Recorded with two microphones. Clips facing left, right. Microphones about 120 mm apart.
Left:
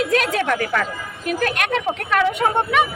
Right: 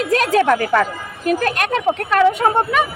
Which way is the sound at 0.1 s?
40° right (ahead or behind).